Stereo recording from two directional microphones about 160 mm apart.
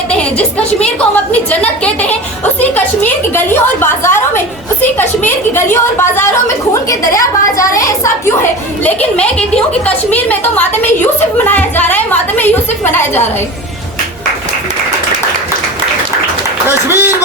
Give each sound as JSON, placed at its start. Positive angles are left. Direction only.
{"t": 0.1, "sound": "a woman's voice", "side_deg": 5}
{"t": 16.6, "sound": "speech", "side_deg": -15}